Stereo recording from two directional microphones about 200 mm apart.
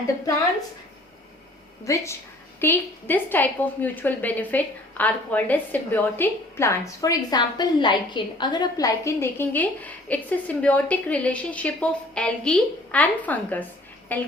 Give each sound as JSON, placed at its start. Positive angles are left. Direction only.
{"t": 1.8, "sound": "a woman's voice", "side_deg": 15}